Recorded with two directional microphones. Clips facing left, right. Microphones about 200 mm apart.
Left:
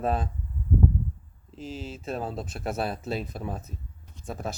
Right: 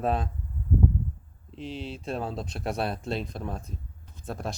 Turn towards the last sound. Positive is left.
turn(degrees=0)  # may be behind; listen again after turning